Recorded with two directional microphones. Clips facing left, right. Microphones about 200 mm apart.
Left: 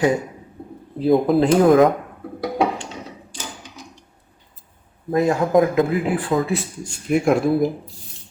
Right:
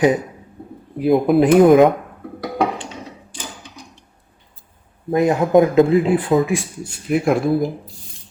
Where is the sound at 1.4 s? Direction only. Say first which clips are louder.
Right 5 dB; 20° right (ahead or behind).